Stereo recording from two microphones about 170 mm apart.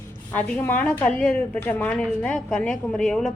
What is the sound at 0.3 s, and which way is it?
A woman's voice, 10° left (ahead or behind).